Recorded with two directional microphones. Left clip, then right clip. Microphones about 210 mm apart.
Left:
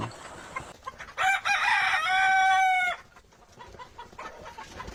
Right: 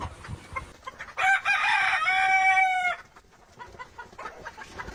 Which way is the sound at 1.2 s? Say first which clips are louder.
Right 2 dB; 50° left (ahead or behind).